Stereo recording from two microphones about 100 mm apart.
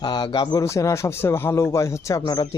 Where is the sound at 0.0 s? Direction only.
45° left (ahead or behind).